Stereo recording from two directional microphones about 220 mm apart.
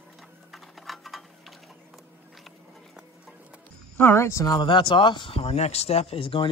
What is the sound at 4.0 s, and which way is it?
Speech, 10° left (ahead or behind).